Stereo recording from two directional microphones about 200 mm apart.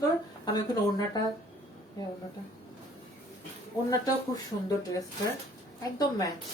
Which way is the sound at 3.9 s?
20° left (ahead or behind).